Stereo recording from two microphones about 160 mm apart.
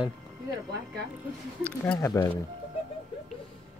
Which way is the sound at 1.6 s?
10° left (ahead or behind).